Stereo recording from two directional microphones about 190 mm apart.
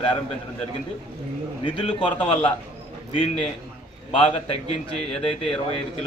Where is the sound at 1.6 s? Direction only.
30° left (ahead or behind).